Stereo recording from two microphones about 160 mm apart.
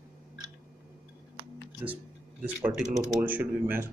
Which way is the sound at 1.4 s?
30° right (ahead or behind).